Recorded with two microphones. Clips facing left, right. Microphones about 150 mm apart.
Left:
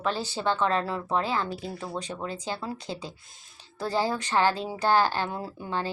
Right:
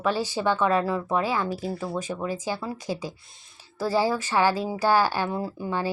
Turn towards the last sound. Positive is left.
turn(degrees=-10)  # may be behind; listen again after turning